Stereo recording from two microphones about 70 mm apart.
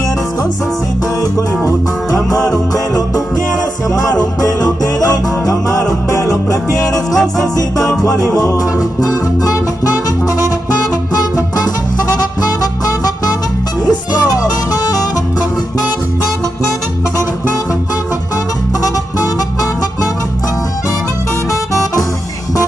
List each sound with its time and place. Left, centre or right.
2.1 s music: centre
4.2 s music: left
11.1 s music: left